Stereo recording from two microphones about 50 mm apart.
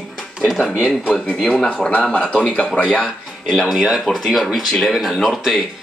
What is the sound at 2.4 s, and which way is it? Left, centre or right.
Speech, centre.